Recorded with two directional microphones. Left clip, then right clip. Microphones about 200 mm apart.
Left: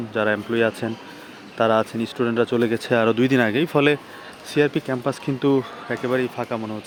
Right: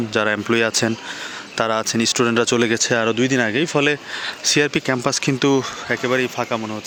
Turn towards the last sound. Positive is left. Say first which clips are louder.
# right 3 dB
turn(degrees=-5)  # may be behind; listen again after turning